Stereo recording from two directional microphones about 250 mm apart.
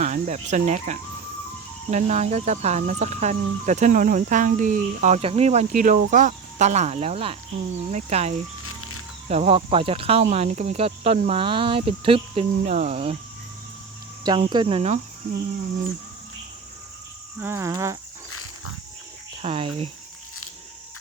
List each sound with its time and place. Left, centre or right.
0.0 s speech: right
8.6 s music: left
9.3 s speech: right
14.3 s speech: centre
17.4 s cricket: centre
18.3 s pig: left
19.4 s speech: right